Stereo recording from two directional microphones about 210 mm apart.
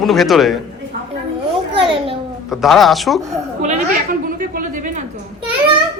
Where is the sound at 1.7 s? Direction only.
25° right (ahead or behind).